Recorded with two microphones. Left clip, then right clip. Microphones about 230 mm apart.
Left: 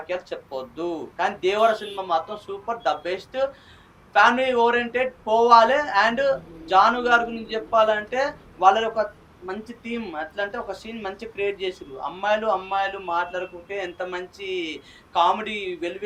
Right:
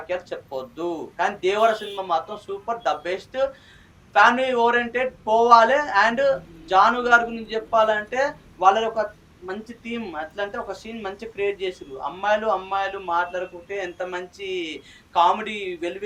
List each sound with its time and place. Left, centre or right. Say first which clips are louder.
0.1 s speech: right 1 dB; left